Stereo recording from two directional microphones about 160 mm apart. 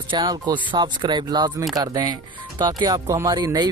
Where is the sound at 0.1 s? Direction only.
25° right (ahead or behind).